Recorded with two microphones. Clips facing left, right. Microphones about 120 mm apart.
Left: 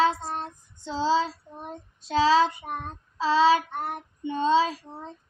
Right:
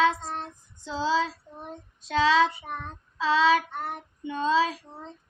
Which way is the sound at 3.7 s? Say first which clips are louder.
Left 2 dB; 50° left (ahead or behind).